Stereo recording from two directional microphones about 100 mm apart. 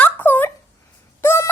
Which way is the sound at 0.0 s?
20° left (ahead or behind).